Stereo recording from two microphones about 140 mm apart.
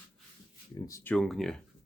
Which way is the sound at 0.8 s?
20° left (ahead or behind).